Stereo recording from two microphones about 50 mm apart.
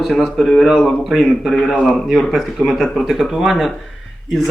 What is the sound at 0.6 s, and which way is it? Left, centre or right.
Speech, centre.